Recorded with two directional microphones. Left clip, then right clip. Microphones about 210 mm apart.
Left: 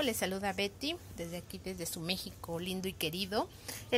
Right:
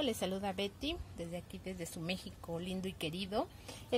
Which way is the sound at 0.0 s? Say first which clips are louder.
Left 3 dB; centre (ahead or behind).